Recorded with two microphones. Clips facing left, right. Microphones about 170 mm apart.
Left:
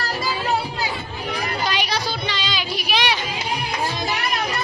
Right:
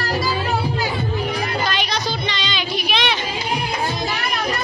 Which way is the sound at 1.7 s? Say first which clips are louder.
Right 1 dB; 10° left (ahead or behind).